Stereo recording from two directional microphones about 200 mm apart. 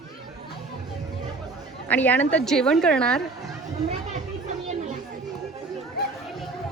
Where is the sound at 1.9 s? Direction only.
10° left (ahead or behind).